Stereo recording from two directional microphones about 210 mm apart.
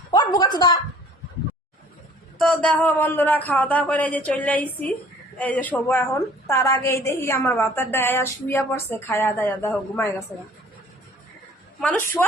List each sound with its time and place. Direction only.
0.1 s a sound: 20° left (ahead or behind)
2.4 s a woman's voice: 5° left (ahead or behind)
11.8 s a woman's voice: 10° left (ahead or behind)